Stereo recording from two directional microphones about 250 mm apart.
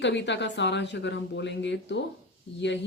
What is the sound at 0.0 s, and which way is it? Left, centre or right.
Speech, left.